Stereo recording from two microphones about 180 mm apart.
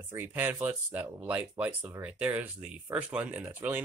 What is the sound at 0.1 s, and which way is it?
Speech, 10° right (ahead or behind).